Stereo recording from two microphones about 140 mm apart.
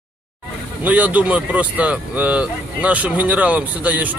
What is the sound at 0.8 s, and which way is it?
Speech, 10° right (ahead or behind).